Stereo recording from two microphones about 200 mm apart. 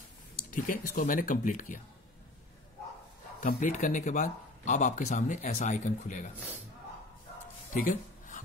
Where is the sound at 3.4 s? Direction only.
40° left (ahead or behind).